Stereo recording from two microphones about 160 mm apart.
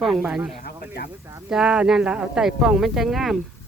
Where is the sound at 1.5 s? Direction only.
5° right (ahead or behind).